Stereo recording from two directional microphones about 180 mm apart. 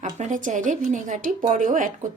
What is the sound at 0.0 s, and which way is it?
Speech, 40° right (ahead or behind).